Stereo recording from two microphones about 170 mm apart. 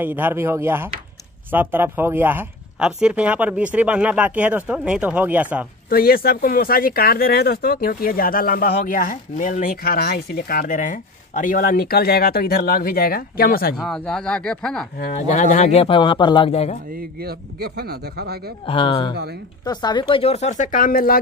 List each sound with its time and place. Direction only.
0.0 s speech: 10° right (ahead or behind)
5.9 s speech: 60° left (ahead or behind)
13.7 s speech: 5° left (ahead or behind)
15.1 s speech: 45° left (ahead or behind)
16.9 s speech: 65° right (ahead or behind)
18.7 s speech: 30° left (ahead or behind); by 21.2 s 60° left (ahead or behind)